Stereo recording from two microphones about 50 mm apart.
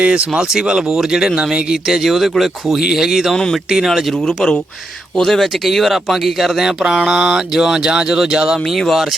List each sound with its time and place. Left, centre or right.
0.0 s speech: right; by 4.2 s centre
4.2 s speech: centre
8.5 s speech: centre